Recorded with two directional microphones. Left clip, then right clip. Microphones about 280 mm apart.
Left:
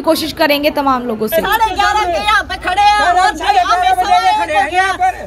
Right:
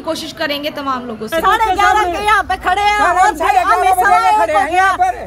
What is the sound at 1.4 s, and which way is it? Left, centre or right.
Speech, centre.